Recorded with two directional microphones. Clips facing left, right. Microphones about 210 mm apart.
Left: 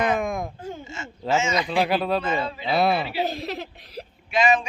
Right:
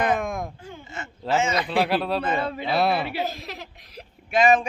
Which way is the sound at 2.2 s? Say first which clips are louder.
Right 1 dB; 55° right (ahead or behind).